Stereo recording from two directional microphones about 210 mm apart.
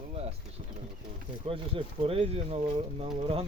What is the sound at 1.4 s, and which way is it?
Speech, 25° right (ahead or behind).